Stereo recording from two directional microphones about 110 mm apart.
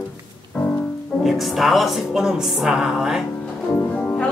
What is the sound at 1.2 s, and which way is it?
A woman's voice, centre (ahead or behind).